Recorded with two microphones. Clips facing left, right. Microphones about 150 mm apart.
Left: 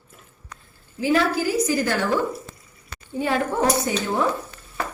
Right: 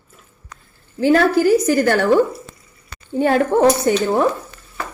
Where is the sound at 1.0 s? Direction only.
60° right (ahead or behind).